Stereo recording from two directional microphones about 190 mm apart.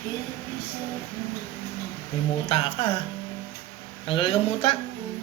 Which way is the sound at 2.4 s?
30° left (ahead or behind).